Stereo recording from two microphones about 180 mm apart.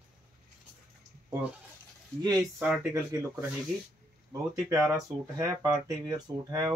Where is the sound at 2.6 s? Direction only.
10° right (ahead or behind).